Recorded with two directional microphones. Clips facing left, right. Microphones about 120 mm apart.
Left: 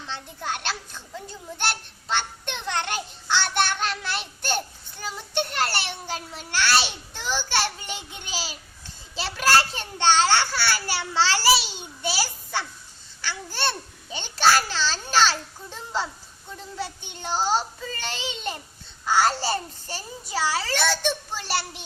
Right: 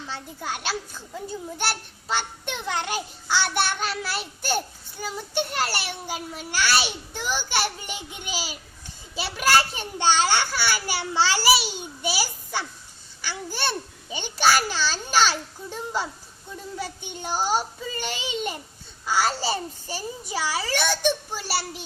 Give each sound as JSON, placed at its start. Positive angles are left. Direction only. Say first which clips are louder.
{"t": 0.1, "sound": "a child's voice", "louder": "left 2 dB", "side_deg": -5}